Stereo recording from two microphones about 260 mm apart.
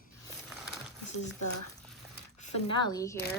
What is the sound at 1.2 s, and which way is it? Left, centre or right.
Speech, left.